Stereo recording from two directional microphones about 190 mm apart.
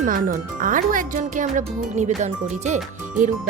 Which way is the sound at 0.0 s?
45° right (ahead or behind).